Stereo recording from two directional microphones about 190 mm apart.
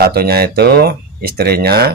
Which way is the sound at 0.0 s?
55° right (ahead or behind).